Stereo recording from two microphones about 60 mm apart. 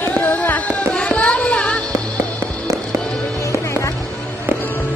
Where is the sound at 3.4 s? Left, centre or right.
Left.